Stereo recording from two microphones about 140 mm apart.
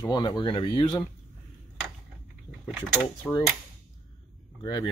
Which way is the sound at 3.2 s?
10° left (ahead or behind).